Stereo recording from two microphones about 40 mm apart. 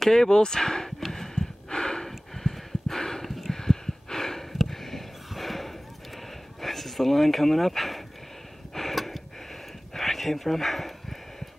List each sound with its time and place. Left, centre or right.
0.0 s speech: centre
1.0 s gasp: centre
1.7 s snort: centre
2.0 s a sound: centre